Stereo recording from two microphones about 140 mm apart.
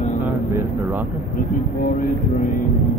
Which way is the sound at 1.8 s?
70° left (ahead or behind).